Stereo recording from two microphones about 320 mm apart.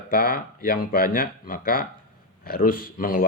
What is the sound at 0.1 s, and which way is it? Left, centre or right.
Speech, left.